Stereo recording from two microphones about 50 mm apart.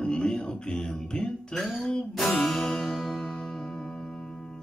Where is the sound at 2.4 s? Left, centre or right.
Centre.